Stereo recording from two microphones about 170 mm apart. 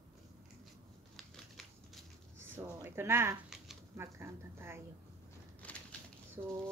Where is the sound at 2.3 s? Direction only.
15° right (ahead or behind).